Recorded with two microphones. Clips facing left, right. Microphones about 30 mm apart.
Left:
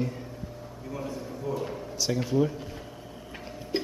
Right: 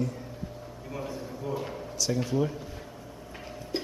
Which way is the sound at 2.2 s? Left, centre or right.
Centre.